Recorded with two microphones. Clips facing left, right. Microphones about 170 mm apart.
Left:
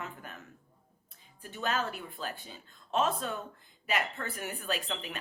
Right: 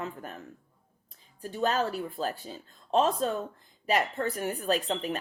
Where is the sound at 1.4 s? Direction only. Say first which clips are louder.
Right 6 dB; 35° right (ahead or behind).